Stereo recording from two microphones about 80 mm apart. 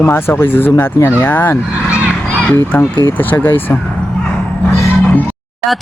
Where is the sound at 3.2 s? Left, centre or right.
Left.